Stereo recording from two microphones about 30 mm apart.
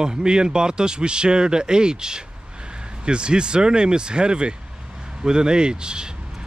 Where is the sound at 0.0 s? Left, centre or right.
Right.